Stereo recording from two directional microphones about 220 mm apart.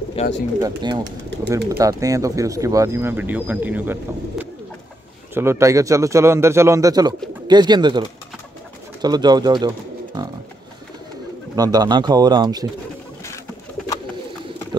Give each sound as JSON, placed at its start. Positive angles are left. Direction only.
{"t": 0.2, "sound": "speech", "side_deg": 30}
{"t": 0.6, "sound": "speech", "side_deg": -15}
{"t": 9.0, "sound": "speech", "side_deg": -20}
{"t": 11.5, "sound": "speech", "side_deg": -15}